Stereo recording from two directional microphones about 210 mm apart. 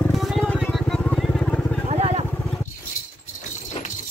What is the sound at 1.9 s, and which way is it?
Vehicle, 30° right (ahead or behind).